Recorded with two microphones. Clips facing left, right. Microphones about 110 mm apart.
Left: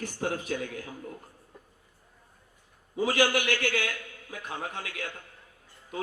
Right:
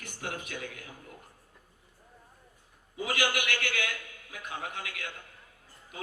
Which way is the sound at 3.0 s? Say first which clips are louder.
Left 6 dB; 35° left (ahead or behind).